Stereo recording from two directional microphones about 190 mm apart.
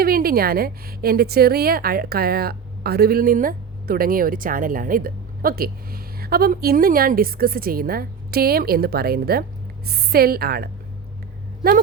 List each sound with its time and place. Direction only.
0.0 s a woman's voice: 50° right (ahead or behind)